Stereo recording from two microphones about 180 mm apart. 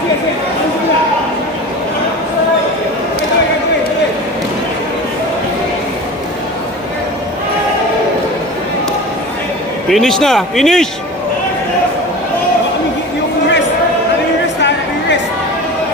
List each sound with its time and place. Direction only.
9.8 s speech: centre (ahead or behind)